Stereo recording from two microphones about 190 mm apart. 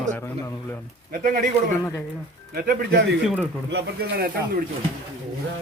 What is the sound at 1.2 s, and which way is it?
Speech, 45° right (ahead or behind).